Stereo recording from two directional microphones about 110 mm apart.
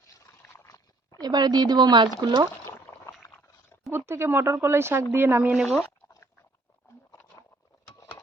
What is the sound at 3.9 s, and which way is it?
Speech, 20° right (ahead or behind).